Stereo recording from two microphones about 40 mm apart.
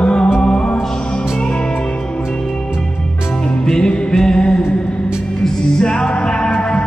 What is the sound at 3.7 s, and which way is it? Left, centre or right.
Music, centre.